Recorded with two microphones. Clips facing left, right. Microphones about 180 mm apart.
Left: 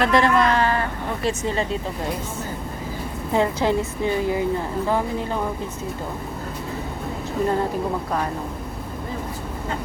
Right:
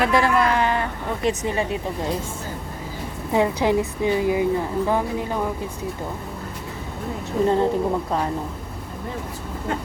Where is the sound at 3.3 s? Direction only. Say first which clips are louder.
Right 1 dB; 15° right (ahead or behind).